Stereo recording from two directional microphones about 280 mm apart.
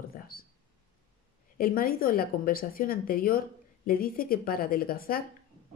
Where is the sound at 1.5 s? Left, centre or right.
Left.